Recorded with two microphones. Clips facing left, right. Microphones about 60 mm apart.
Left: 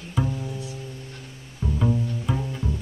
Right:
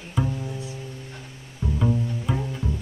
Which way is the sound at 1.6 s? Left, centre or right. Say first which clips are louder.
Even; centre.